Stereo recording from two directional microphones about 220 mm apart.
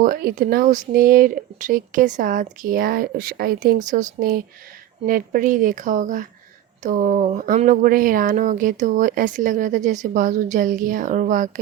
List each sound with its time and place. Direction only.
0.0 s speech: 40° right (ahead or behind)